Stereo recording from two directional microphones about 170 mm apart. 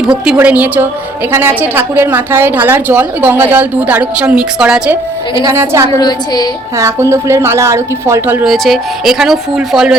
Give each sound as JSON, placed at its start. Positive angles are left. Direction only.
{"t": 0.3, "sound": "a woman's voice", "side_deg": -10}
{"t": 5.3, "sound": "a woman's voice", "side_deg": -20}
{"t": 6.0, "sound": "a woman's voice", "side_deg": 25}
{"t": 6.7, "sound": "a woman's voice", "side_deg": -15}
{"t": 8.4, "sound": "speech", "side_deg": 0}